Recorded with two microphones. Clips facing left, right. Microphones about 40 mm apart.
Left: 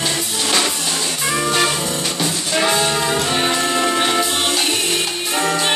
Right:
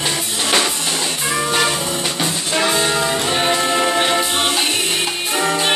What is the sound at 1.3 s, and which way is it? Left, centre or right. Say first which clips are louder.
Music: even; centre.